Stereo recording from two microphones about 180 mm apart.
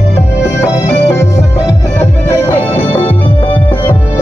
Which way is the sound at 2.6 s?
10° left (ahead or behind).